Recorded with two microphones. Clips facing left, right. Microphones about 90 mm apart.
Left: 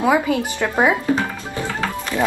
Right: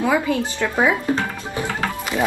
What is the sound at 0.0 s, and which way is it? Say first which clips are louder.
Speech: left 2 dB; 15° left (ahead or behind).